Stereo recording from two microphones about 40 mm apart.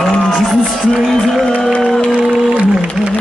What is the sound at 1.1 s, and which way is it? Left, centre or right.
Music, centre.